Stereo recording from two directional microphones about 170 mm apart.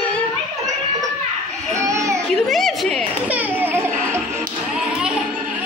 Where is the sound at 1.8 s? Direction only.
15° right (ahead or behind).